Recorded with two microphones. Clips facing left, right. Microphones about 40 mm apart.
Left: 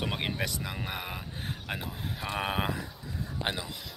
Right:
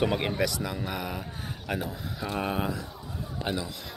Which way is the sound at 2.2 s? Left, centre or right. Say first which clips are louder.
Right 2 dB; left.